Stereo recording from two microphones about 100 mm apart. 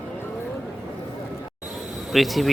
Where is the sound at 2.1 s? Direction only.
Centre (ahead or behind).